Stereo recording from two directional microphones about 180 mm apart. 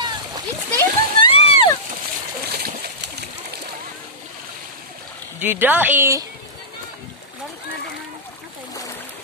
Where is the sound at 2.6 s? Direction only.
65° right (ahead or behind).